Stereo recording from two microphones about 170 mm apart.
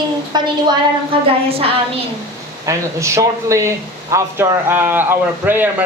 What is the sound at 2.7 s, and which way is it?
A woman's voice, 20° right (ahead or behind).